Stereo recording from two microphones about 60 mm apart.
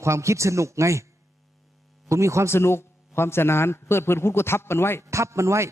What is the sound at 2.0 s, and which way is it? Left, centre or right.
Speech, right.